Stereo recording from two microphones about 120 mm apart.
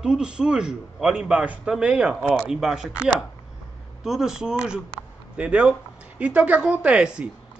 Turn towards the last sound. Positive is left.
turn(degrees=-10)  # may be behind; listen again after turning